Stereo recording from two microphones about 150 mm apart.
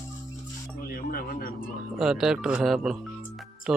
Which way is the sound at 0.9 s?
85° left.